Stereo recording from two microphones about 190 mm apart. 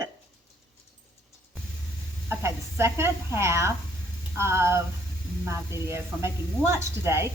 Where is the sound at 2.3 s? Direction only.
15° right (ahead or behind).